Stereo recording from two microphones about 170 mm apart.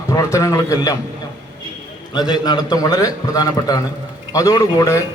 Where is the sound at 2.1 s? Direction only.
25° left (ahead or behind).